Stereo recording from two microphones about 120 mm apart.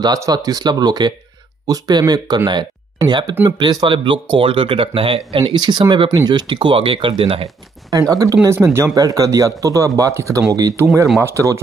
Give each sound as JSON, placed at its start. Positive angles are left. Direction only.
{"t": 0.0, "sound": "speech", "side_deg": -30}
{"t": 5.4, "sound": "speech", "side_deg": -35}
{"t": 7.4, "sound": "speech", "side_deg": -30}